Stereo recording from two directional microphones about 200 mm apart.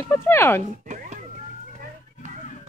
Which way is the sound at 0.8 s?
40° right (ahead or behind).